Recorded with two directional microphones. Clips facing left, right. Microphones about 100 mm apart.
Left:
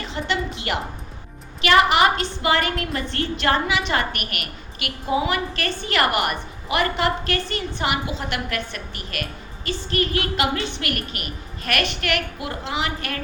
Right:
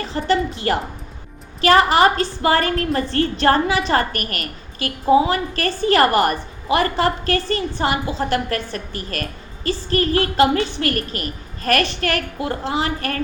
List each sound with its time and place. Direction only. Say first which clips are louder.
0.0 s a woman's voice: right 6 dB; 40° right (ahead or behind)